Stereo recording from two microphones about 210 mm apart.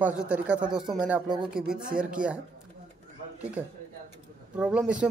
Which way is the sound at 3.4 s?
5° right (ahead or behind).